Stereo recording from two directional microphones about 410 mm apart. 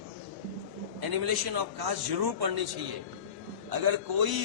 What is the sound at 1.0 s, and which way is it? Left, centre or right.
Speech, right.